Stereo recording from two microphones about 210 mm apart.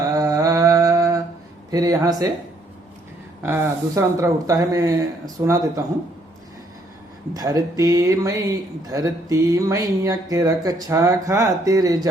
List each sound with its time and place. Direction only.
0.2 s a sound: 15° right (ahead or behind)
1.7 s speech: 15° right (ahead or behind)
3.4 s speech: 15° right (ahead or behind)
7.3 s speech: 20° right (ahead or behind)